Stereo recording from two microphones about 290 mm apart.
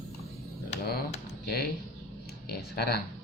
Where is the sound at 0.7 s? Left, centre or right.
Left.